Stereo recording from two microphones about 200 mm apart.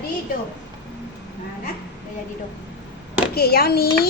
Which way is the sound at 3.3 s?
50° left (ahead or behind).